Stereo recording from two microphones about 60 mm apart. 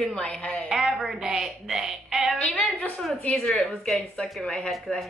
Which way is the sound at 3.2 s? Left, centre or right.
Centre.